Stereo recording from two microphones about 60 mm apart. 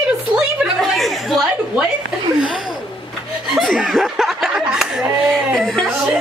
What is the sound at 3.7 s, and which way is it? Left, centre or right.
Chuckle, centre.